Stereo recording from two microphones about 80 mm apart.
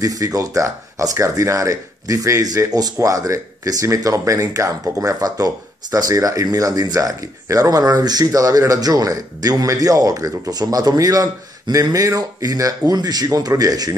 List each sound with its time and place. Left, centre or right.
0.0 s speech: right